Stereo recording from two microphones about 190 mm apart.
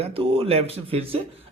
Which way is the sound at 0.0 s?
30° right (ahead or behind).